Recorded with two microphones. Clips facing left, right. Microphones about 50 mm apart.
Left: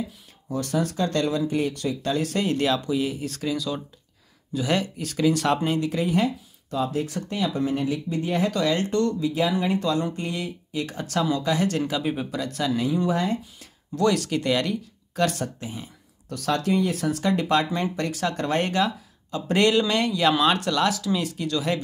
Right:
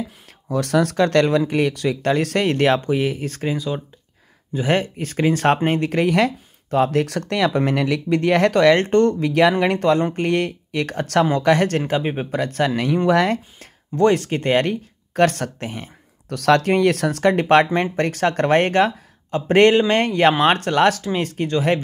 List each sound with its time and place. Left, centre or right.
0.5 s speech: right
3.5 s speech: right
4.6 s speech: right
9.3 s speech: right
11.8 s speech: right
13.9 s speech: right